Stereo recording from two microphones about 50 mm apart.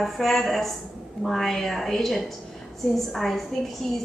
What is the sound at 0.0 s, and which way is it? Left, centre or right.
A woman's voice, centre.